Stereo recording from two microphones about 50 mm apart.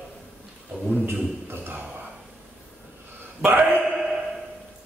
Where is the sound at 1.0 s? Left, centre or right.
Right.